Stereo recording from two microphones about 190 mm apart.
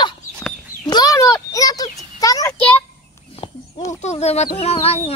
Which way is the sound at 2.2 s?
20° left (ahead or behind).